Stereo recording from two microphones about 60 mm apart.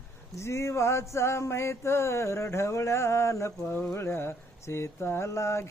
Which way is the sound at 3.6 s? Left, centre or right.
Left.